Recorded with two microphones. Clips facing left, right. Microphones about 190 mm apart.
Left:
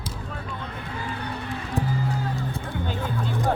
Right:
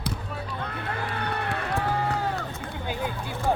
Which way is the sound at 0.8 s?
65° right (ahead or behind).